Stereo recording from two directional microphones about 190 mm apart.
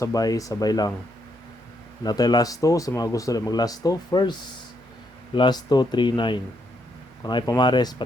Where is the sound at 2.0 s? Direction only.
20° left (ahead or behind).